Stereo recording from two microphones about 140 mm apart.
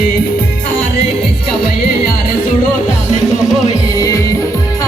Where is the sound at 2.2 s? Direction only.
65° left (ahead or behind).